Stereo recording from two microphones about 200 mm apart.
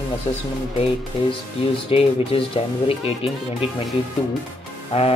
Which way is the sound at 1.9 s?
30° left (ahead or behind).